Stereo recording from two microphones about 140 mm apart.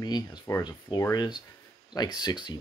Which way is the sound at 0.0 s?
30° left (ahead or behind).